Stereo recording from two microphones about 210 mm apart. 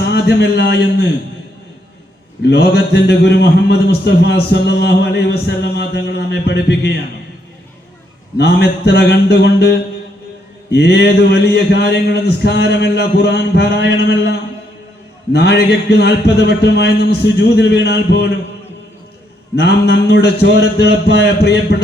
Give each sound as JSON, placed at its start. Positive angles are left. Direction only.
{"t": 0.0, "sound": "a man's voice", "side_deg": 55}
{"t": 2.4, "sound": "a man's voice", "side_deg": 50}
{"t": 8.4, "sound": "a man's voice", "side_deg": 50}
{"t": 15.3, "sound": "a man's voice", "side_deg": 50}
{"t": 19.5, "sound": "a man's voice", "side_deg": 50}